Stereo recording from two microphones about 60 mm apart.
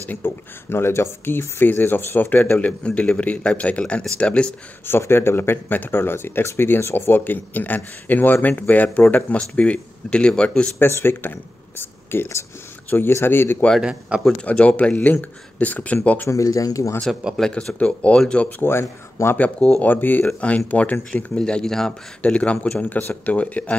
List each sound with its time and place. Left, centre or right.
0.1 s speech: left
2.6 s speech: left
4.8 s speech: left; by 10.7 s centre
10.8 s speech: left
13.7 s a man's voice: centre
14.4 s speech: left
16.3 s speech: left
17.1 s a man's voice: centre
17.4 s speech: centre
18.6 s speech: left
19.3 s speech: left
21.4 s speech: centre
22.2 s speech: left